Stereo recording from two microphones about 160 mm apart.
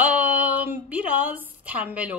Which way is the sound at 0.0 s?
10° right (ahead or behind).